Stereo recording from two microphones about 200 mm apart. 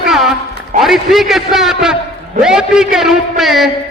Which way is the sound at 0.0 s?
Centre (ahead or behind).